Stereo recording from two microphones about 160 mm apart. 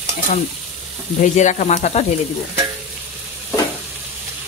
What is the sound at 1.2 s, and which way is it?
Stir, 50° left (ahead or behind).